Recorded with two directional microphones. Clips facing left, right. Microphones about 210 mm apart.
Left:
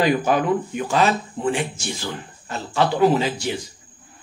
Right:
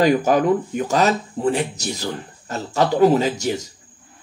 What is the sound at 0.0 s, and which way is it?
Speech, 40° right (ahead or behind).